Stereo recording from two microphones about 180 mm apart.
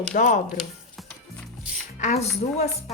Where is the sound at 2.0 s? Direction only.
40° left (ahead or behind).